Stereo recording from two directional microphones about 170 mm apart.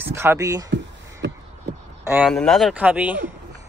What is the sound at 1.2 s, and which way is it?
Crow, 90° right.